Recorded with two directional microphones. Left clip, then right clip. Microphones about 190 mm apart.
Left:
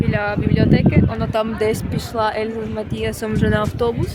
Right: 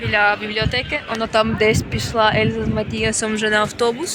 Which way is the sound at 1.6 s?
20° right (ahead or behind).